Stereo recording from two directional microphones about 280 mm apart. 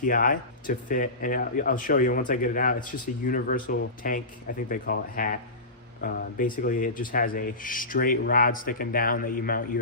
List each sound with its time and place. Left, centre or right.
0.0 s speech: left
4.7 s rub: left